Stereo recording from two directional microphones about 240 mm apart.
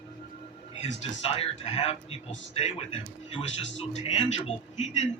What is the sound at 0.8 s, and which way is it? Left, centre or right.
Speech, left.